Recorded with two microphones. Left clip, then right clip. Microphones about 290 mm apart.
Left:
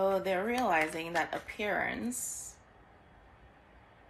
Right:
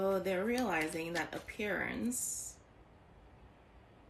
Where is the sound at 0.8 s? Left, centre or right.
Centre.